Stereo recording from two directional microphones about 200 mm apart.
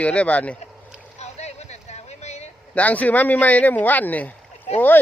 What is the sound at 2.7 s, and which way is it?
Speech, 5° left (ahead or behind).